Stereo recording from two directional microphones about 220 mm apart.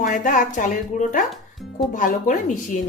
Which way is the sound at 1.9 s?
35° left (ahead or behind).